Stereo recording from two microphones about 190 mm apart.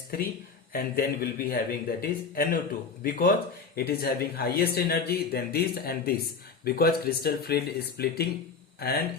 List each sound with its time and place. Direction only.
0.1 s speech: 50° left (ahead or behind)